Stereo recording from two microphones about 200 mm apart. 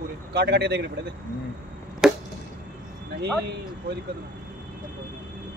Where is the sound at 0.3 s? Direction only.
55° right (ahead or behind).